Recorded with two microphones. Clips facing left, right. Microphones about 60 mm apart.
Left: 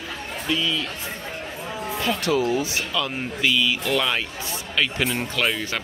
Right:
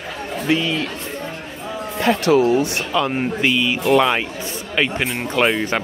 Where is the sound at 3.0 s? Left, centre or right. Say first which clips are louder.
Right 8 dB; right.